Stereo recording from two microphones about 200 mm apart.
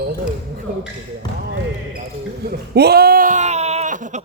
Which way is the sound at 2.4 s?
55° right (ahead or behind).